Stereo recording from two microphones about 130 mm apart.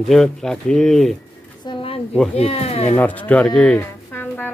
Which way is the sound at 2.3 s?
50° left (ahead or behind).